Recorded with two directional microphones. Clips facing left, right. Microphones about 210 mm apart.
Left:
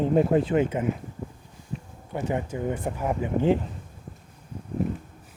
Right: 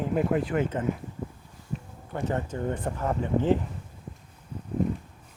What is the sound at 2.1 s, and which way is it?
Speech, 15° left (ahead or behind).